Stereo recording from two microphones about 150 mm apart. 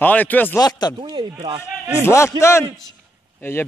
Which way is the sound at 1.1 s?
30° right (ahead or behind).